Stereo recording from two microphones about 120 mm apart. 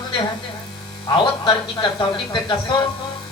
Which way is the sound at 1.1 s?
35° left (ahead or behind).